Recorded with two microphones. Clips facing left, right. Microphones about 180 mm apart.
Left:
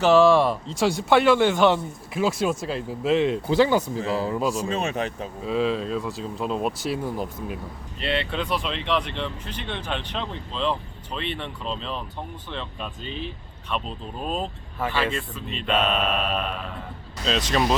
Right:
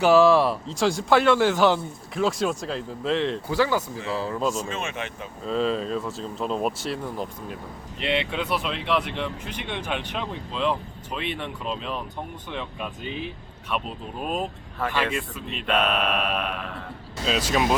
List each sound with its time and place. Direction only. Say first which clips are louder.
0.0 s a man's voice: even; 5° right (ahead or behind)
3.5 s speech: left 4 dB; 20° left (ahead or behind)
4.5 s speech: left 4 dB; 35° left (ahead or behind)
5.5 s a man's voice: even; 5° left (ahead or behind)
7.9 s speech: right 1 dB; 15° right (ahead or behind)
14.8 s speech: even; 10° left (ahead or behind)
15.1 s a man's voice: even; 5° right (ahead or behind)